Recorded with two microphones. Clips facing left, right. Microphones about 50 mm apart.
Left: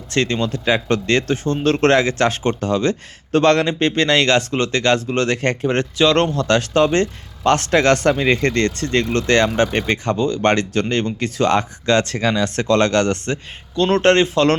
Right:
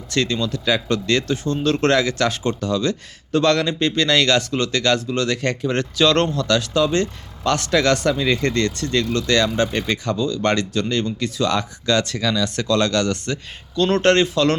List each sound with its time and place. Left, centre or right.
0.1 s speech: left